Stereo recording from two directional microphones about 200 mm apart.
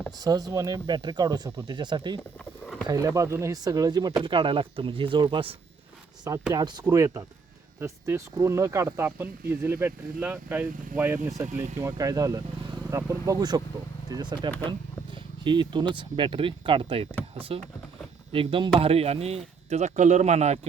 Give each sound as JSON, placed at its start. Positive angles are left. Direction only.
{"t": 0.2, "sound": "speech", "side_deg": -20}
{"t": 2.4, "sound": "a sound", "side_deg": 5}
{"t": 2.8, "sound": "speech", "side_deg": -15}
{"t": 14.7, "sound": "vehicle", "side_deg": -25}
{"t": 16.0, "sound": "speech", "side_deg": -25}